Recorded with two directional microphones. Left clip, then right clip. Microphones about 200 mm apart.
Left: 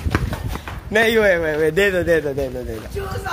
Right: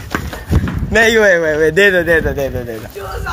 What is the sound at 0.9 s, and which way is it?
Speech, 20° right (ahead or behind).